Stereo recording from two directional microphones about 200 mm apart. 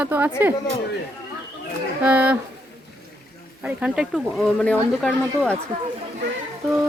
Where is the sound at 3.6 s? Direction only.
5° right (ahead or behind).